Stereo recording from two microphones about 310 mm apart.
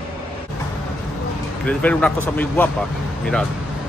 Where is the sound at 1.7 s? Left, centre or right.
Centre.